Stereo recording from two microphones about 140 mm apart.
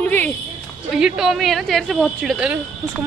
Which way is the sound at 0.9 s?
5° right (ahead or behind).